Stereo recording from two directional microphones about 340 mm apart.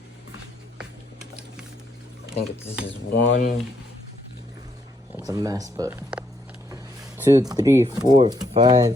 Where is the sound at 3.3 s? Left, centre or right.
Left.